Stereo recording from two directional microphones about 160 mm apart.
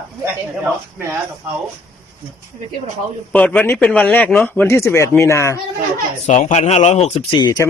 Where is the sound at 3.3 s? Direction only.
5° left (ahead or behind).